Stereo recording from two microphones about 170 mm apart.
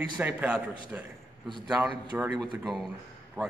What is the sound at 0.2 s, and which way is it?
Speech, 10° right (ahead or behind).